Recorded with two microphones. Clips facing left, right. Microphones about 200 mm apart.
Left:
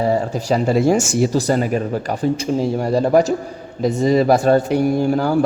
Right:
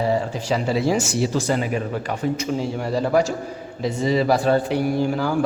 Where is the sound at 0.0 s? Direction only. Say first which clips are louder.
Left 3 dB; 45° left (ahead or behind).